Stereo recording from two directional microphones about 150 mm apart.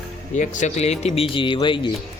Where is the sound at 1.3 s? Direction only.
35° left (ahead or behind).